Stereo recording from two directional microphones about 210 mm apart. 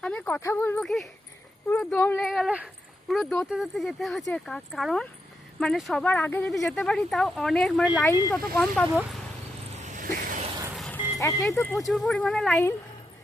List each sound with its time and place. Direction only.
0.0 s speech: 5° left (ahead or behind)
7.9 s speech: 15° left (ahead or behind)
8.5 s speech: 5° left (ahead or behind)
9.7 s a sound: 35° right (ahead or behind)
10.8 s music: 5° left (ahead or behind)
11.5 s speech: 10° left (ahead or behind)